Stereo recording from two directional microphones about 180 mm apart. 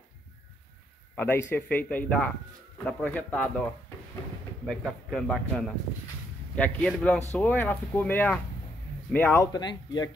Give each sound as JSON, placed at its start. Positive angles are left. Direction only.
{"t": 1.1, "sound": "speech", "side_deg": 10}
{"t": 4.6, "sound": "a man's voice", "side_deg": 0}